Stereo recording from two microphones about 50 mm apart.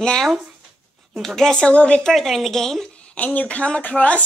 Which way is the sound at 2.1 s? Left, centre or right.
Centre.